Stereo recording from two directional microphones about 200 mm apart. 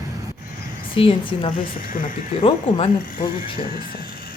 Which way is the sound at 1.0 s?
30° left (ahead or behind).